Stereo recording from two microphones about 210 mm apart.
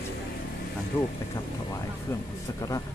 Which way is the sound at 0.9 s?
10° left (ahead or behind).